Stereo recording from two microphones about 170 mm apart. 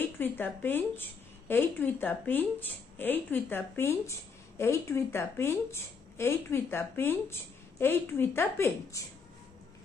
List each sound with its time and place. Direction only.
0.0 s speech: 10° left (ahead or behind)